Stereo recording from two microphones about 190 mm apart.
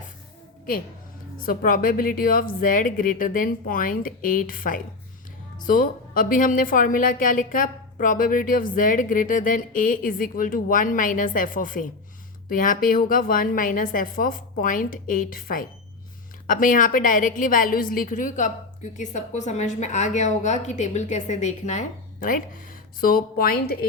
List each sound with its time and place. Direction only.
1.5 s a woman's voice: 50° left (ahead or behind)